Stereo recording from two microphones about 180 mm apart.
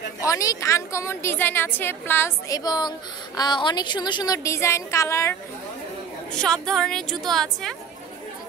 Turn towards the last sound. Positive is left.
turn(degrees=0)  # may be behind; listen again after turning